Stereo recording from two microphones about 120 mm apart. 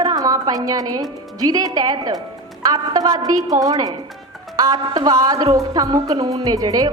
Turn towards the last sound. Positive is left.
turn(degrees=-30)  # may be behind; listen again after turning